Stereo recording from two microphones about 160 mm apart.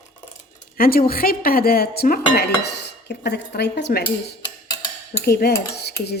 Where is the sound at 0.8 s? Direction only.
65° left (ahead or behind); by 4.0 s 90° left.